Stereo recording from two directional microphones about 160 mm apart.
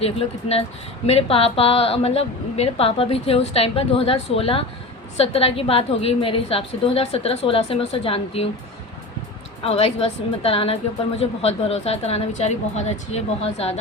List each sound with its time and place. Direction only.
0.0 s a woman's voice: 40° left (ahead or behind)
9.6 s a woman's voice: 40° left (ahead or behind)